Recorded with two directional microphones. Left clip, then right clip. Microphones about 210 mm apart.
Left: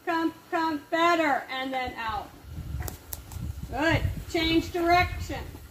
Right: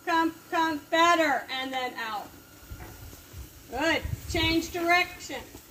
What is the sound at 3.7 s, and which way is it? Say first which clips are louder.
Speech: left 1 dB; 30° right (ahead or behind).